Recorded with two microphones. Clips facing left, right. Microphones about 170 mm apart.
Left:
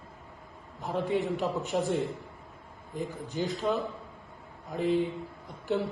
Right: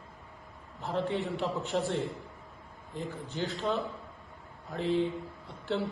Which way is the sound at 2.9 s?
15° left (ahead or behind).